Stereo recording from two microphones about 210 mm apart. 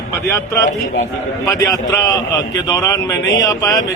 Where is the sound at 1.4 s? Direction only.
15° left (ahead or behind).